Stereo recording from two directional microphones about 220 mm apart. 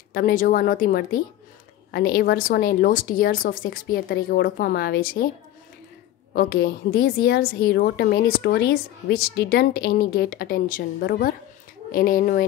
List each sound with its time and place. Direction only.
0.1 s speech: 40° left (ahead or behind)
6.3 s a woman's voice: 45° left (ahead or behind)